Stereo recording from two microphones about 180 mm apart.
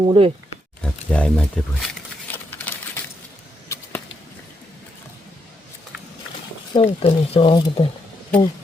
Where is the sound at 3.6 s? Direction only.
15° left (ahead or behind).